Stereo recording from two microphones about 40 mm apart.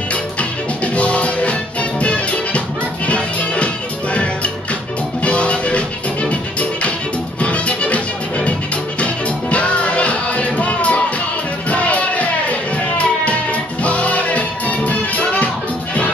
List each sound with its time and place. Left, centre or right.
0.9 s music: left